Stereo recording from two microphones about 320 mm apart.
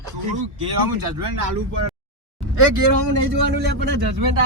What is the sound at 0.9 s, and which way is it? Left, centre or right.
Speech, right.